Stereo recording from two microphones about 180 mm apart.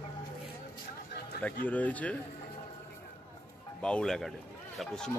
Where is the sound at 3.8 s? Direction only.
5° left (ahead or behind).